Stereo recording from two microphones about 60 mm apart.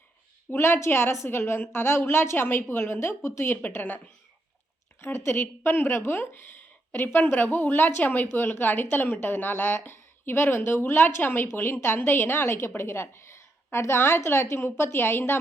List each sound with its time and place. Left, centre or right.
0.5 s a woman's voice: left
3.5 s a woman's voice: left
4.9 s a woman's voice: left
8.3 s a woman's voice: left